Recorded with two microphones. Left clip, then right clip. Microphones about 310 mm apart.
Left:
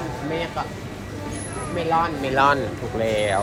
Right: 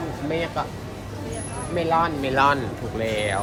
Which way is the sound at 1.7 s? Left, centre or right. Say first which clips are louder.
Even; centre.